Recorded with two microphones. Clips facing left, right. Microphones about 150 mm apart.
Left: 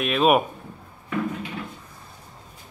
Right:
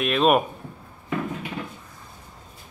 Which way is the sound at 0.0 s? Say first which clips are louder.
Even; centre (ahead or behind).